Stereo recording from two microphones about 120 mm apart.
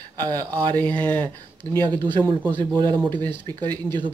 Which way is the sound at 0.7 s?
15° left (ahead or behind).